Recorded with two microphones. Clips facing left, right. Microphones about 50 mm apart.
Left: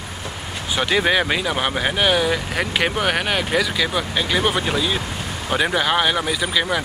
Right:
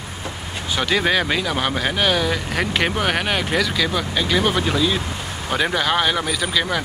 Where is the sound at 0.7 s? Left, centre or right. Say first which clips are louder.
Left 1 dB; centre.